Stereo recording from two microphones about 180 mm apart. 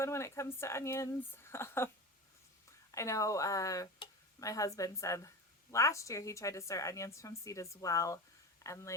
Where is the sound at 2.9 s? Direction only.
15° left (ahead or behind).